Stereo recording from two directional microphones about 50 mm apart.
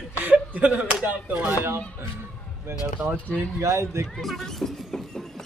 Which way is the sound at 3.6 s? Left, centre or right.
Right.